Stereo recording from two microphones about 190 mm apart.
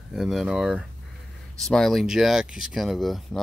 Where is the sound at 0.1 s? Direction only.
Centre (ahead or behind).